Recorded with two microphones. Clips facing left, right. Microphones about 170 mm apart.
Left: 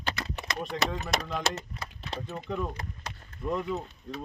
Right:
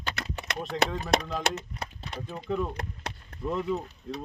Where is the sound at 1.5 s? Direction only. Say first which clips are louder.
Right 2 dB; 60° right (ahead or behind).